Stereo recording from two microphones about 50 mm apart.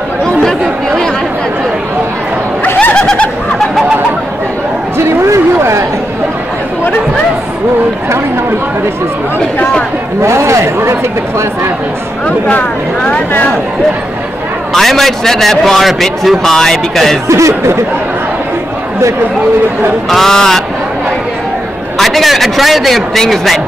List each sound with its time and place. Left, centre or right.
0.4 s chatter: centre
2.8 s bird: left
4.9 s a sound: right
10.2 s speech: right
12.3 s speech: left
14.7 s a man's voice: centre
17.3 s speech: right
20.1 s speech: centre
21.9 s a man's voice: centre